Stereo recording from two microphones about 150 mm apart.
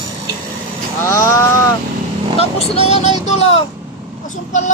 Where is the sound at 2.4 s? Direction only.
40° left (ahead or behind).